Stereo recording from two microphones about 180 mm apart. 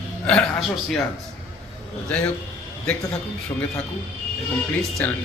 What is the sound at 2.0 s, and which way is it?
Speech, 10° left (ahead or behind).